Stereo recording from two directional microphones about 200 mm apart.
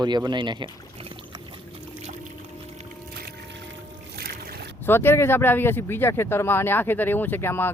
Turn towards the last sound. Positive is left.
turn(degrees=10)  # may be behind; listen again after turning